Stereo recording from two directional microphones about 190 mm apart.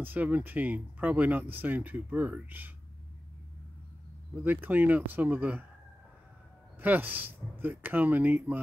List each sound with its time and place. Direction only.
0.0 s speech: 10° right (ahead or behind)
4.4 s speech: 10° right (ahead or behind)
6.8 s speech: 10° right (ahead or behind)